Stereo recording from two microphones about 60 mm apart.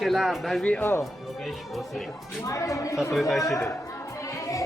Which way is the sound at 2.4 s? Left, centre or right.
Left.